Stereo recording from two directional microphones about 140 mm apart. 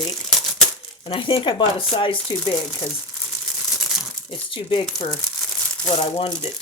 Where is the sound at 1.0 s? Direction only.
40° left (ahead or behind).